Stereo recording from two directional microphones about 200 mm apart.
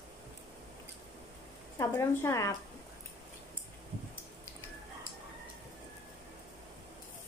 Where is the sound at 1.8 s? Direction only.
15° left (ahead or behind).